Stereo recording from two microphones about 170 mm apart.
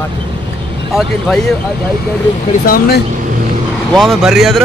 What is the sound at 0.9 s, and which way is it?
Speech, centre (ahead or behind).